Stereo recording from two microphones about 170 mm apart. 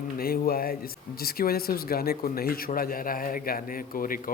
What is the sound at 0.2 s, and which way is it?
A man's voice, 60° left (ahead or behind).